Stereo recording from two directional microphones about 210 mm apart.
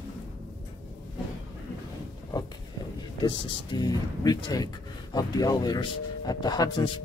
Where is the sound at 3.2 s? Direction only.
20° left (ahead or behind).